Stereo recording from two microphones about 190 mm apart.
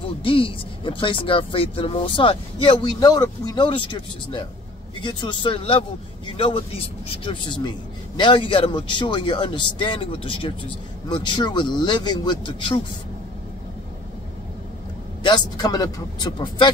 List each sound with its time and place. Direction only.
0.2 s speech: 30° left (ahead or behind)
15.2 s speech: 20° left (ahead or behind)